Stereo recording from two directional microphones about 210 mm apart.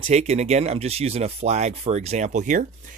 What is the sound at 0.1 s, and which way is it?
Speech, 30° right (ahead or behind).